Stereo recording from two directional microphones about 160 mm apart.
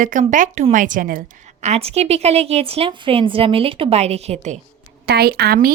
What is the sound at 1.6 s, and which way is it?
A woman's voice, 40° right (ahead or behind).